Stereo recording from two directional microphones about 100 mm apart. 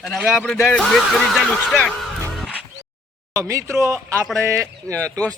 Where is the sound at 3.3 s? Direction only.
30° right (ahead or behind).